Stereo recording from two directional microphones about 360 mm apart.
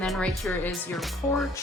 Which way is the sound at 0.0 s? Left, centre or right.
Centre.